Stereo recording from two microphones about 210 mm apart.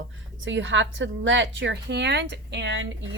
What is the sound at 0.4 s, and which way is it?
A woman's voice, 60° right (ahead or behind).